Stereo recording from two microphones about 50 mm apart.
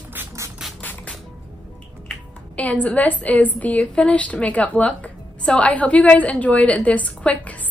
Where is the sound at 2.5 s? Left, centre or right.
Left.